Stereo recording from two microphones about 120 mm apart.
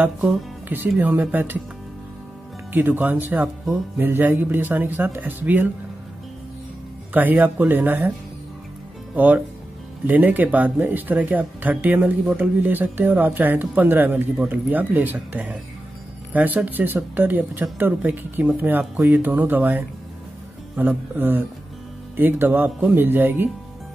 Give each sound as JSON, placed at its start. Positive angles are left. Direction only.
{"t": 0.2, "sound": "speech", "side_deg": -10}
{"t": 2.7, "sound": "speech", "side_deg": -15}
{"t": 7.2, "sound": "speech", "side_deg": -15}
{"t": 9.1, "sound": "speech", "side_deg": -15}